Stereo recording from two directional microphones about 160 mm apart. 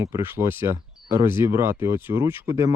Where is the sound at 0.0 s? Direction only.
15° right (ahead or behind).